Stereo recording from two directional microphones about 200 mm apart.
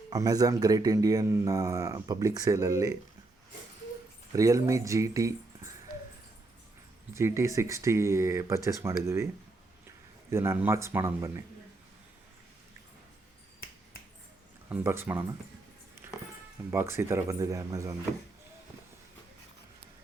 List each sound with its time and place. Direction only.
0.1 s speech: 20° right (ahead or behind)
4.3 s speech: 15° right (ahead or behind)
7.1 s speech: 15° right (ahead or behind)
10.3 s speech: 10° right (ahead or behind)
14.7 s speech: 10° right (ahead or behind)
16.7 s speech: 15° right (ahead or behind)